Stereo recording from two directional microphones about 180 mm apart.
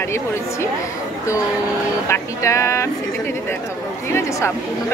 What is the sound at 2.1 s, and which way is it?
Speech, 15° left (ahead or behind).